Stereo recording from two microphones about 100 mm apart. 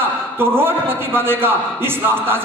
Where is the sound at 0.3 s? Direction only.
20° right (ahead or behind).